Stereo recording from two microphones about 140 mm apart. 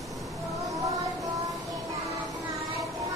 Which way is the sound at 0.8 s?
25° right (ahead or behind).